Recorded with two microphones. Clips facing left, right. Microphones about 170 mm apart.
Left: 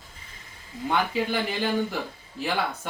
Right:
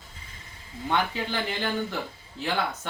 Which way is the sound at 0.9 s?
10° left (ahead or behind).